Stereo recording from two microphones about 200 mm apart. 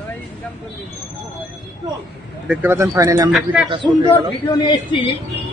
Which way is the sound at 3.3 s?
5° right (ahead or behind).